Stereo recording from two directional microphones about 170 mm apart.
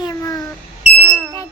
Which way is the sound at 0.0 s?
20° left (ahead or behind).